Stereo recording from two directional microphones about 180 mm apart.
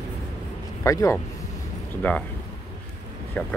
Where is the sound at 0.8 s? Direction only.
15° left (ahead or behind).